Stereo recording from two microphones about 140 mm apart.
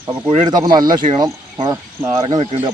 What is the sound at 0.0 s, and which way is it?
Speech, 35° right (ahead or behind).